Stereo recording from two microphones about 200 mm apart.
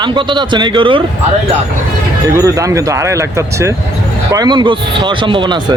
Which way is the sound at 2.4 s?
15° right (ahead or behind).